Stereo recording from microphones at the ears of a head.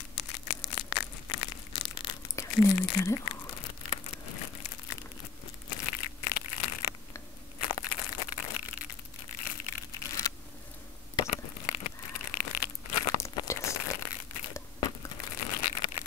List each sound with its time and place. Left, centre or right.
0.1 s tearing: left
5.7 s crushing: left
11.1 s a sound: left